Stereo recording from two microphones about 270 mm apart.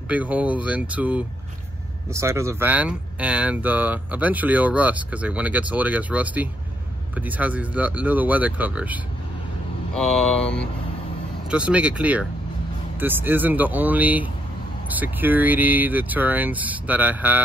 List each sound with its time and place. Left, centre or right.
0.1 s speech: centre